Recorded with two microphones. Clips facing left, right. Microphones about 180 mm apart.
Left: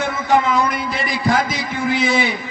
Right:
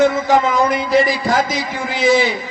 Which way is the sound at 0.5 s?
55° right (ahead or behind).